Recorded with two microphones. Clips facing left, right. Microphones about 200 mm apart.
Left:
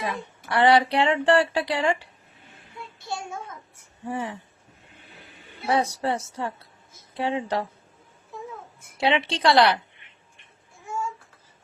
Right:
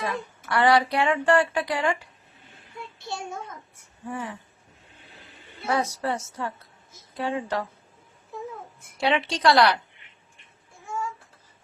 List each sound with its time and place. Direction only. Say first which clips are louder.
0.0 s speech: even; 25° left (ahead or behind)
3.0 s a child's voice: left 1 dB; centre (ahead or behind)
4.0 s speech: left 3 dB; 25° left (ahead or behind)
5.6 s a woman's voice: left 2 dB; 30° left (ahead or behind)
9.0 s speech: left 1 dB; 25° left (ahead or behind)